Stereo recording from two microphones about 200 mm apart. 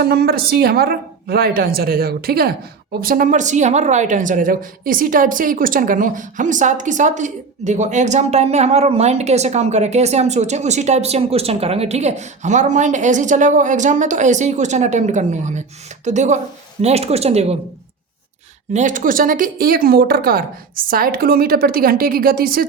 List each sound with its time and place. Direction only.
0.0 s a woman's voice: 55° right (ahead or behind); by 17.6 s 30° right (ahead or behind)
18.7 s speech: 40° right (ahead or behind)